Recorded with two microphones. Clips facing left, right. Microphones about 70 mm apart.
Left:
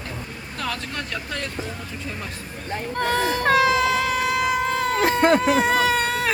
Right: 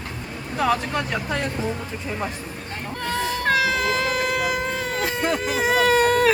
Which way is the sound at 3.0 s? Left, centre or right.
Left.